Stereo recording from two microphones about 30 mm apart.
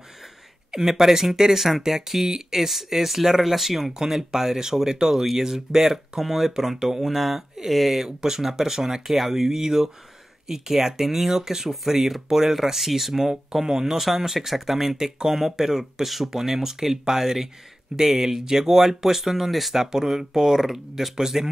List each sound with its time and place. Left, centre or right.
0.7 s speech: centre
8.0 s speech: centre
15.8 s speech: centre
16.3 s speech: centre